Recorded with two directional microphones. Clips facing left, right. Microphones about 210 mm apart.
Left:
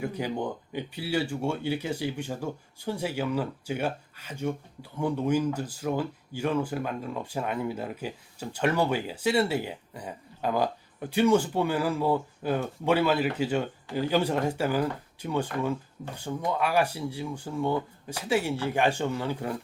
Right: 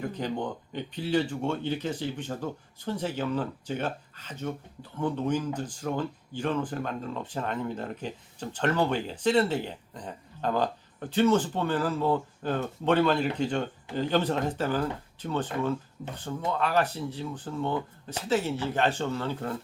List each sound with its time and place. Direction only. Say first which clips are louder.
0.0 s speech: left 1 dB; 10° left (ahead or behind)